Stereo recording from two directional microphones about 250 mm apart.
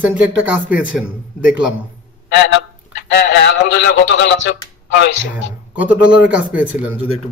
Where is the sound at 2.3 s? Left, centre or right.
Left.